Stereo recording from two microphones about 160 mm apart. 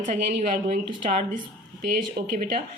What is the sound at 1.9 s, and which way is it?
Speech, 65° right (ahead or behind).